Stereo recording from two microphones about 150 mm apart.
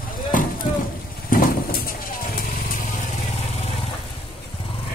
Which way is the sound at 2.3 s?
90° left.